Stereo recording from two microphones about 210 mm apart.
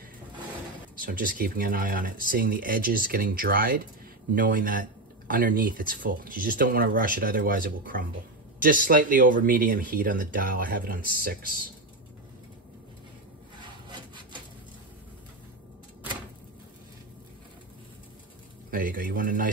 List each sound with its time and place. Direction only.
0.9 s speech: 40° right (ahead or behind)
18.7 s speech: 40° right (ahead or behind)